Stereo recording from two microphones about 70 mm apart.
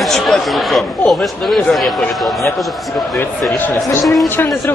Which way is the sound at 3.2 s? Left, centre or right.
Left.